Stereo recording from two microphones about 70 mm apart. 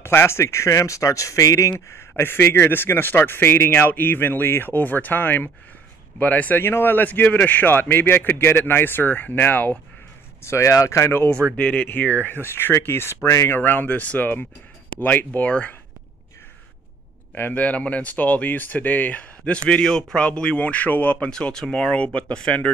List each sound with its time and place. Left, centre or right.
0.0 s speech: left
2.0 s speech: left
10.4 s speech: left
11.2 s speech: centre; by 13.6 s left
13.6 s speech: left
17.6 s speech: centre